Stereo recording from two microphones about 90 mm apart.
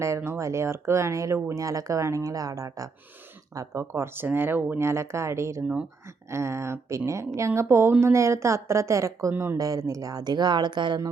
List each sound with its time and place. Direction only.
0.0 s a woman's voice: 30° right (ahead or behind)
9.3 s speech: 25° right (ahead or behind)
9.6 s speech: 40° right (ahead or behind)